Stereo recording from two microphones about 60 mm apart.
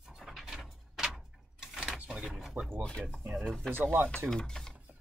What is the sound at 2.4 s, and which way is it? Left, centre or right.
Speech, centre.